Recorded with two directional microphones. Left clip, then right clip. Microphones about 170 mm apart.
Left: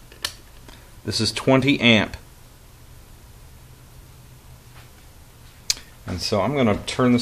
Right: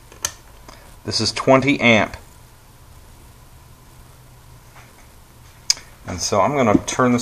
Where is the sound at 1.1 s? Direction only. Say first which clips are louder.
Right 4 dB; 65° left (ahead or behind).